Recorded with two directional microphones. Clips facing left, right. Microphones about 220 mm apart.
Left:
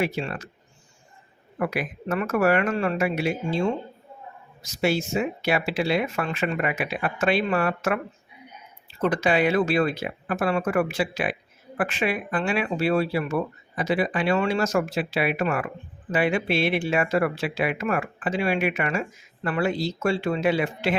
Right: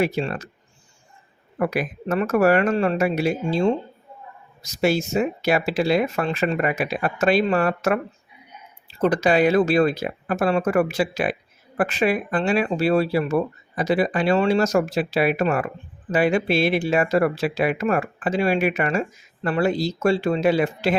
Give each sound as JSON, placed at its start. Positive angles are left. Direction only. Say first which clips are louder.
{"t": 0.0, "sound": "speech", "louder": "right 4 dB", "side_deg": -40}
{"t": 1.5, "sound": "speech", "louder": "right 4 dB", "side_deg": -40}